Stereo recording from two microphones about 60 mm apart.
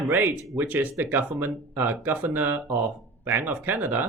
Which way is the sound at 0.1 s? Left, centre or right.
Right.